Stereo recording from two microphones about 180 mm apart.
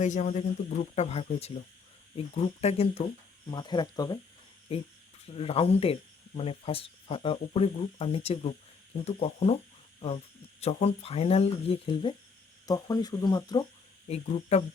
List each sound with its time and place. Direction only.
0.0 s speech: 40° left (ahead or behind); by 4.2 s 20° left (ahead or behind)
5.2 s speech: 30° left (ahead or behind)
10.6 s speech: 35° left (ahead or behind)
12.6 s speech: 20° left (ahead or behind)
14.1 s speech: 40° left (ahead or behind)